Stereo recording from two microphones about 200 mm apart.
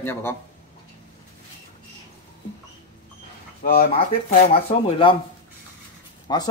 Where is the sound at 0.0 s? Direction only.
10° left (ahead or behind).